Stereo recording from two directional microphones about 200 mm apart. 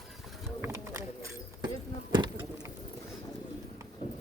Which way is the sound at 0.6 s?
15° right (ahead or behind).